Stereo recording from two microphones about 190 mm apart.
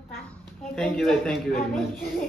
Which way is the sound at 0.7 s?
Centre (ahead or behind).